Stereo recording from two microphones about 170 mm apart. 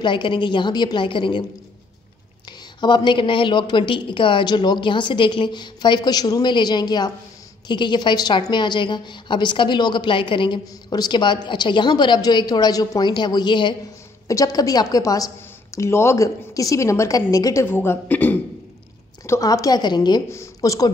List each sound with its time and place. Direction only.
0.0 s a woman's voice: 30° left (ahead or behind)
2.8 s a woman's voice: 25° left (ahead or behind)